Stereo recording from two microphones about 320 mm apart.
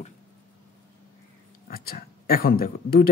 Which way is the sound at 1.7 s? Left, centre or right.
Left.